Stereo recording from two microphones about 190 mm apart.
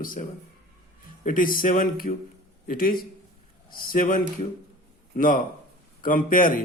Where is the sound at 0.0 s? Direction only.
45° left (ahead or behind).